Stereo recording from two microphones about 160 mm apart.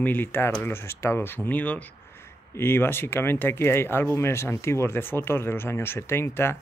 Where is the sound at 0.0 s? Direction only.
10° left (ahead or behind).